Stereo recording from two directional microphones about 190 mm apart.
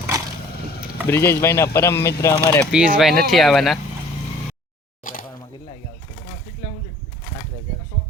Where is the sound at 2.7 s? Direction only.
5° right (ahead or behind).